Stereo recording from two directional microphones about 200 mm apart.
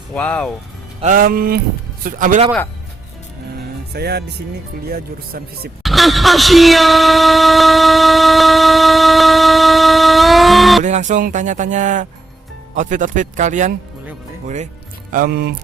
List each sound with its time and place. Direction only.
0.1 s speech: 5° left (ahead or behind)
1.0 s speech: 45° right (ahead or behind)
3.9 s speech: 55° right (ahead or behind)
5.8 s speech: centre (ahead or behind)
10.8 s speech: 35° right (ahead or behind)
15.1 s speech: 45° right (ahead or behind)